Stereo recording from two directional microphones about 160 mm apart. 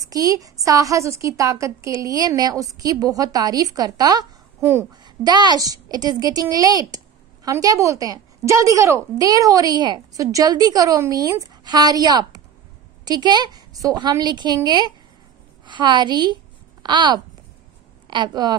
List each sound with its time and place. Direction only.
0.0 s a woman's voice: 20° right (ahead or behind)